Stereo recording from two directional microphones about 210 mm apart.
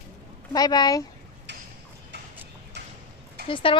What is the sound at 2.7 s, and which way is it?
Clip-clop, 55° right (ahead or behind).